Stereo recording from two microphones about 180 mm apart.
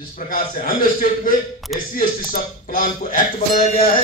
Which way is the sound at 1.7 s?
Centre (ahead or behind).